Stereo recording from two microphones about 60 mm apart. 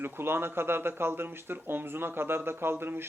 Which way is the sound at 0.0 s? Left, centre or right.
Right.